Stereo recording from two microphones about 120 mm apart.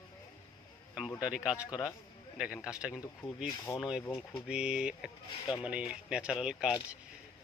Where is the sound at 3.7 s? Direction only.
35° left (ahead or behind).